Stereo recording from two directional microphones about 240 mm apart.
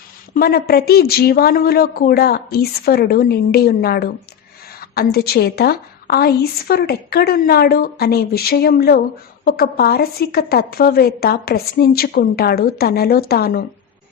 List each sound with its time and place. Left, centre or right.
0.3 s a woman's voice: left